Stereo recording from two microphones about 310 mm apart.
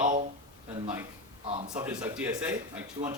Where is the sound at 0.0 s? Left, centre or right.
Right.